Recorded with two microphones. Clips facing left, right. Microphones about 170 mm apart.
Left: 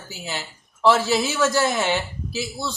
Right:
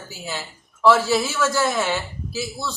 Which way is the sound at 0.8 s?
20° left (ahead or behind).